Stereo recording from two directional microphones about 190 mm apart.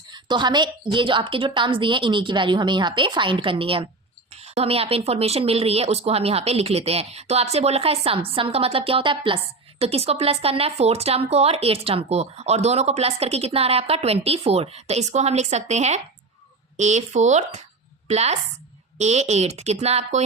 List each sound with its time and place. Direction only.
0.1 s a woman's voice: 25° right (ahead or behind)